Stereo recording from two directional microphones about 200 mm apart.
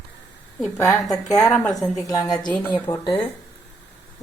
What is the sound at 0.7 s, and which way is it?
A woman's voice, 10° left (ahead or behind).